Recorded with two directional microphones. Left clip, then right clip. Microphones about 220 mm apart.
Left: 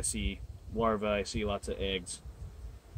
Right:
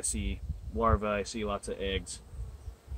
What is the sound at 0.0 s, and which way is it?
Speech, 5° left (ahead or behind).